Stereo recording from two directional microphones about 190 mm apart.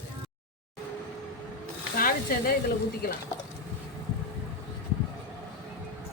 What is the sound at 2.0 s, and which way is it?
Speech, 50° left (ahead or behind).